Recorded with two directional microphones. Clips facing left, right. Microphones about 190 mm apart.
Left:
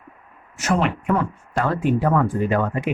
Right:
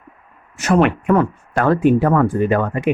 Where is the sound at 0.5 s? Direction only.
65° right (ahead or behind).